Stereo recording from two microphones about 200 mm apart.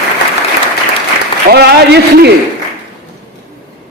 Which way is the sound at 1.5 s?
55° right (ahead or behind).